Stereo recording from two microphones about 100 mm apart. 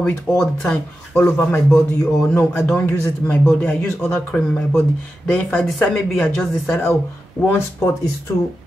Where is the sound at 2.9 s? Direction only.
20° left (ahead or behind).